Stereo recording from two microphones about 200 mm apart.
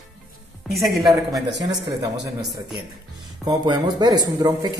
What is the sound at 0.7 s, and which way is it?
Speech, centre (ahead or behind).